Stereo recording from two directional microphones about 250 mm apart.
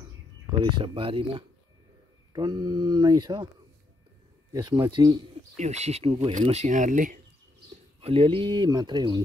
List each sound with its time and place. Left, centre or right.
0.5 s a man's voice: centre
4.5 s a man's voice: centre